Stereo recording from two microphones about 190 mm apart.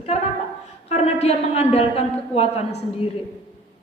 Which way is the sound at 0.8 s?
35° left (ahead or behind).